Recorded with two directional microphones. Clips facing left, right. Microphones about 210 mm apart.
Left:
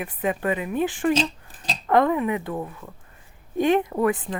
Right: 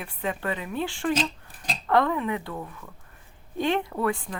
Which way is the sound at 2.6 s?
30° left (ahead or behind).